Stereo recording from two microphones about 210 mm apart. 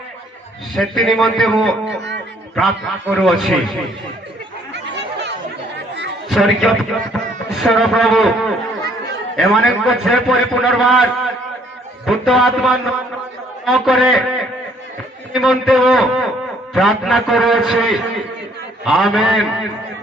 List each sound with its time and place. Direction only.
0.8 s a man's voice: centre (ahead or behind)
4.7 s chatter: 55° right (ahead or behind)
6.2 s a man's voice: centre (ahead or behind)